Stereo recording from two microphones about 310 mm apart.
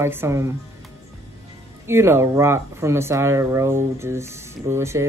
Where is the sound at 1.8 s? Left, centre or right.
Centre.